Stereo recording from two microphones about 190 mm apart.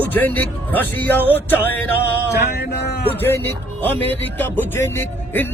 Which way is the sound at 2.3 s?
60° left (ahead or behind).